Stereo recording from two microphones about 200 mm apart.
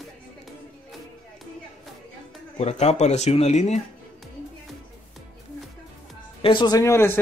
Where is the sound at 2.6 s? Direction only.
35° left (ahead or behind).